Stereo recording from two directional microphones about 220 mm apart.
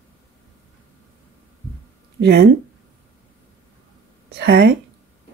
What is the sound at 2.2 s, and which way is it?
Speech, 50° right (ahead or behind).